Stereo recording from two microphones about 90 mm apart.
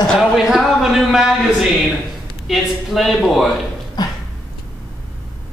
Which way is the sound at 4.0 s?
45° left (ahead or behind).